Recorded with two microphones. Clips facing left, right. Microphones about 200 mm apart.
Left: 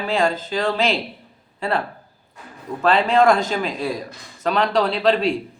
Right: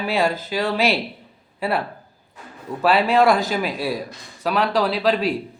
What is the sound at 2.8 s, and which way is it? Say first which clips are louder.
A man's voice: even; 5° right (ahead or behind).